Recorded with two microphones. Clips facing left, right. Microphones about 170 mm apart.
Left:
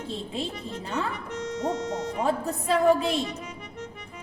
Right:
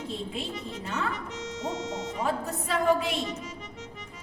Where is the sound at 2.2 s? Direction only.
30° left (ahead or behind).